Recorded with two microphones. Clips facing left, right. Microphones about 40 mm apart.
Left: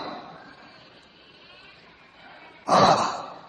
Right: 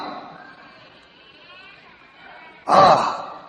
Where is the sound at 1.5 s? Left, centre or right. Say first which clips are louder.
Right 7 dB; right.